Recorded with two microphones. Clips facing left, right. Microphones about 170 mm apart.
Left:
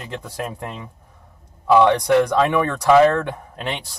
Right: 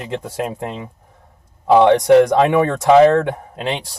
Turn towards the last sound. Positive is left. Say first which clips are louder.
# right 5 dB
turn(degrees=-25)  # may be behind; listen again after turning